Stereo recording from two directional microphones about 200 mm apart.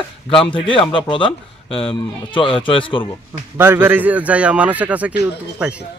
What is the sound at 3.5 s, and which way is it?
A man's voice, 10° right (ahead or behind).